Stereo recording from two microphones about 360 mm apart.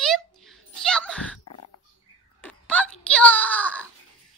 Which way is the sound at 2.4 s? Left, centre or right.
Centre.